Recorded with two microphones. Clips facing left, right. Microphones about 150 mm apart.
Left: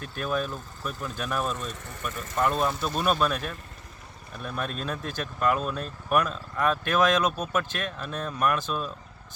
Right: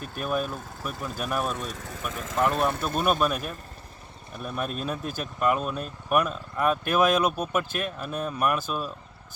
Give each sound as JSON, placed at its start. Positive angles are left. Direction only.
{"t": 0.0, "sound": "speech", "side_deg": -10}
{"t": 1.7, "sound": "speech", "side_deg": -90}
{"t": 2.4, "sound": "speech", "side_deg": -5}
{"t": 2.7, "sound": "speech", "side_deg": -55}
{"t": 3.0, "sound": "speech", "side_deg": -10}